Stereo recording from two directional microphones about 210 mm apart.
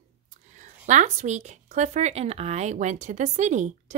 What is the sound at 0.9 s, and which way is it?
Speech, 35° right (ahead or behind).